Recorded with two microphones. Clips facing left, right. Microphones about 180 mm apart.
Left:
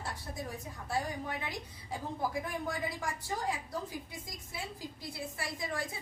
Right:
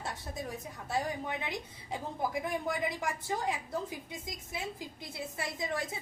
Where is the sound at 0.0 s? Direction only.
20° right (ahead or behind).